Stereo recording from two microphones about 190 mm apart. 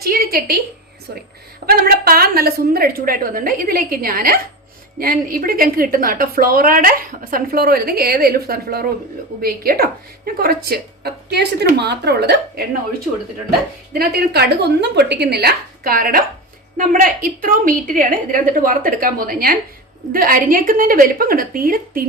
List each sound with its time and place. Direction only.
0.0 s a sound: 50° right (ahead or behind)
1.6 s a woman's voice: 55° right (ahead or behind)
14.0 s a woman's voice: 55° right (ahead or behind)